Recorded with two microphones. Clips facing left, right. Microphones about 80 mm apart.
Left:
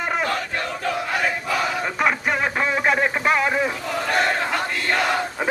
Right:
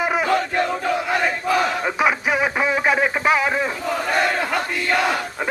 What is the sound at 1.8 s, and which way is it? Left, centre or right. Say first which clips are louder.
Radio: right 2 dB; centre.